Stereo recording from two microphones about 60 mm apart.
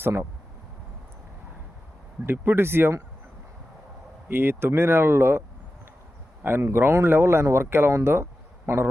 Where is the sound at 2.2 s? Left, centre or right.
Right.